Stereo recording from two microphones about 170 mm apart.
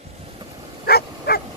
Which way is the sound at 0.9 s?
65° left (ahead or behind).